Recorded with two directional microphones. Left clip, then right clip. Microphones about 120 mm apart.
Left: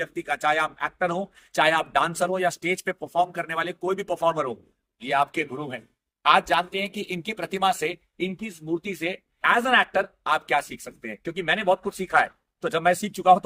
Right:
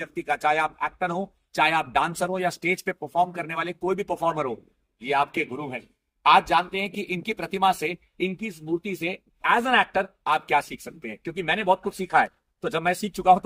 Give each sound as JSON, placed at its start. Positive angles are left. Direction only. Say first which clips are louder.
{"t": 0.0, "sound": "a man's voice", "louder": "even", "side_deg": 50}
{"t": 6.2, "sound": "speech", "louder": "right 1 dB", "side_deg": 50}